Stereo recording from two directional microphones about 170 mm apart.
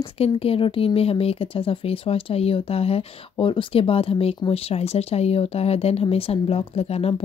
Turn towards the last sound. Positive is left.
turn(degrees=35)  # may be behind; listen again after turning